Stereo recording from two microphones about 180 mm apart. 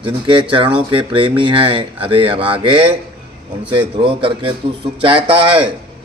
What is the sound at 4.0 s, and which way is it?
Speech, 30° right (ahead or behind).